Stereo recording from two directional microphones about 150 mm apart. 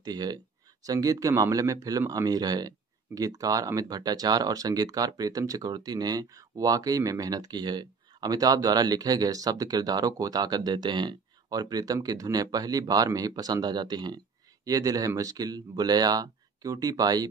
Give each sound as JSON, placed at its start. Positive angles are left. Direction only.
{"t": 0.0, "sound": "speech", "side_deg": -25}